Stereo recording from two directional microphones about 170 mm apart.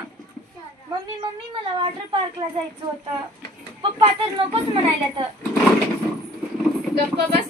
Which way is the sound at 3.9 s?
30° right (ahead or behind).